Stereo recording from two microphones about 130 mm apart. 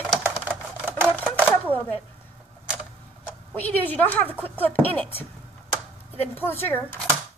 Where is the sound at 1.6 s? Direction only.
15° left (ahead or behind).